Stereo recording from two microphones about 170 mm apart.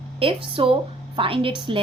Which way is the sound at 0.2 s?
30° right (ahead or behind).